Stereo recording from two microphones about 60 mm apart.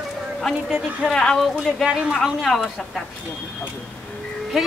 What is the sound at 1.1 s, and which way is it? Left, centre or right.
Speech, centre.